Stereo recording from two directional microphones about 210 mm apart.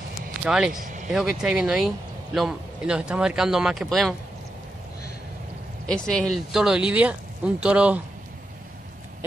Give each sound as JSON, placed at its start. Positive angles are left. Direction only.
{"t": 0.5, "sound": "speech", "side_deg": -5}
{"t": 5.9, "sound": "speech", "side_deg": 5}